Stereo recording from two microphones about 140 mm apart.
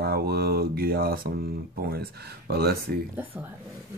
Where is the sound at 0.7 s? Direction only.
90° right.